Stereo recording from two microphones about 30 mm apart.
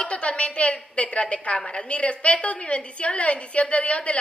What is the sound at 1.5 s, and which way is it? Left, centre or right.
A woman's voice, left.